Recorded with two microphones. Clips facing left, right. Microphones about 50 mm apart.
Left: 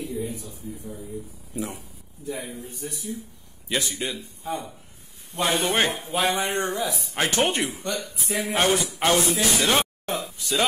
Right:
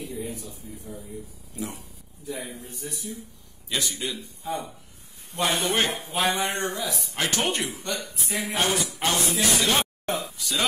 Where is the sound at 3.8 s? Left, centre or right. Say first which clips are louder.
Left 1 dB; left.